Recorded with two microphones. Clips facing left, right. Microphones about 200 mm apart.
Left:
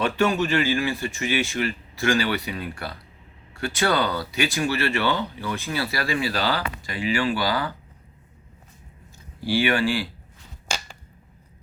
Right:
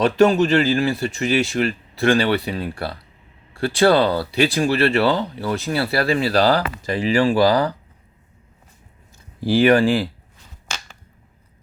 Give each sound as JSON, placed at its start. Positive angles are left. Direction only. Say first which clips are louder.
{"t": 0.0, "sound": "speech", "louder": "right 7 dB", "side_deg": -35}
{"t": 9.6, "sound": "speech", "louder": "right 10 dB", "side_deg": -40}